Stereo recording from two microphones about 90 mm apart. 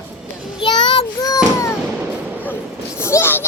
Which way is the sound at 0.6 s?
55° left (ahead or behind).